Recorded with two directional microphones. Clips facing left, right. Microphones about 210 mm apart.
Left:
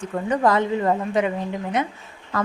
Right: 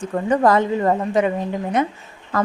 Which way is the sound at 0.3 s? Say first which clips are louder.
Right 3 dB; 45° right (ahead or behind).